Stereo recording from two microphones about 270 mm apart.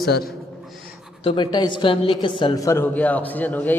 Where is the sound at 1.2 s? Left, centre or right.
Centre.